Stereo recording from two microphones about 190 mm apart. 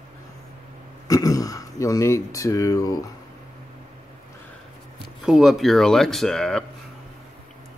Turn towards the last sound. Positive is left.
turn(degrees=5)  # may be behind; listen again after turning